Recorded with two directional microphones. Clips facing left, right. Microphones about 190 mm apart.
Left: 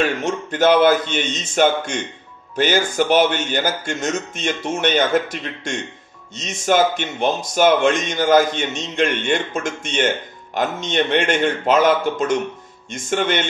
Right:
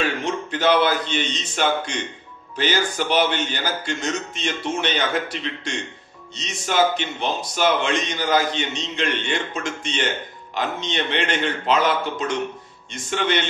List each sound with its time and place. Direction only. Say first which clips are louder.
0.2 s a man's voice: left 4 dB; 45° left (ahead or behind)